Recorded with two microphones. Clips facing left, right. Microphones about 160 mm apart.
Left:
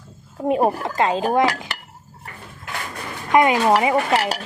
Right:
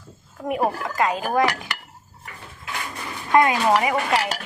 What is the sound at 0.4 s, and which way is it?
Speech, 25° left (ahead or behind).